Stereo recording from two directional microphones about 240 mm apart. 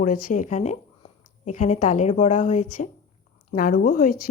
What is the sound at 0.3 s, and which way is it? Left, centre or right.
Speech, left.